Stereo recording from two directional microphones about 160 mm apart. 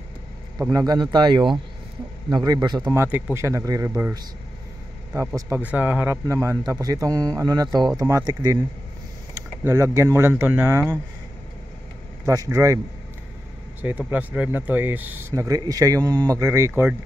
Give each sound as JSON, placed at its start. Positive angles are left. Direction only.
{"t": 0.7, "sound": "a man's voice", "side_deg": -25}
{"t": 12.3, "sound": "a man's voice", "side_deg": -20}
{"t": 13.7, "sound": "speech", "side_deg": -10}